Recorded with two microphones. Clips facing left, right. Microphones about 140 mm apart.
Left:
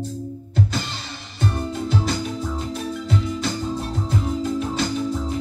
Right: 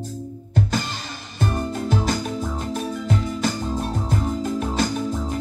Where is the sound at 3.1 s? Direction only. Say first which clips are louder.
Right 1 dB; 45° right (ahead or behind).